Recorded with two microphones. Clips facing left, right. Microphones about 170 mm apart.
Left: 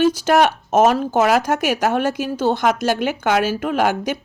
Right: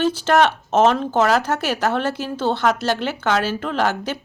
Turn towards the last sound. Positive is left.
turn(degrees=10)  # may be behind; listen again after turning